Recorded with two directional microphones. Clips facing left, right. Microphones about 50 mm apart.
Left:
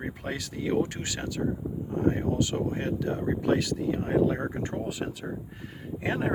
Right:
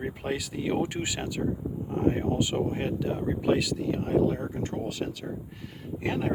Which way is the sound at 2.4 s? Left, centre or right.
Centre.